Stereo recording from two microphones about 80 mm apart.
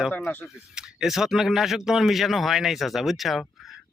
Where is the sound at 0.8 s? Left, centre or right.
Centre.